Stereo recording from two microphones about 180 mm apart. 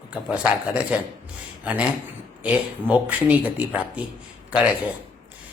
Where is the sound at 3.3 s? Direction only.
10° right (ahead or behind).